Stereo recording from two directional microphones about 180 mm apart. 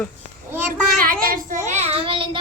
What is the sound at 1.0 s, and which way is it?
Speech, 55° right (ahead or behind).